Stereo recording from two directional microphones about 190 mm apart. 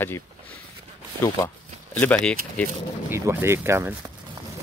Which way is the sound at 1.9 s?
10° left (ahead or behind).